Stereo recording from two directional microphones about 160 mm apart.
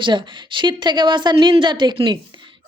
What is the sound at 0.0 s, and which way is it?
A woman's voice, 30° right (ahead or behind).